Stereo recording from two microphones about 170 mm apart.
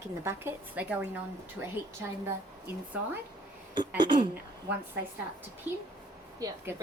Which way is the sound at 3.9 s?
25° right (ahead or behind).